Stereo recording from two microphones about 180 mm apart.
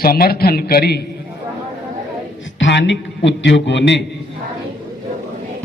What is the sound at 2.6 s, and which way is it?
A man's voice, 85° left.